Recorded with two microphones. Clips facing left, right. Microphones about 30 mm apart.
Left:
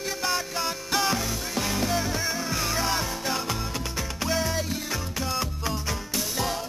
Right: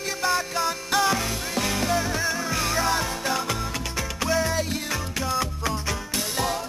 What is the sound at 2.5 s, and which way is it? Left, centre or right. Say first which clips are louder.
Music: right 3 dB; centre.